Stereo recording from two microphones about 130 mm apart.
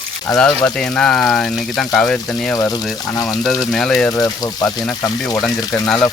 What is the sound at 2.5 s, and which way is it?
Speech, 25° left (ahead or behind).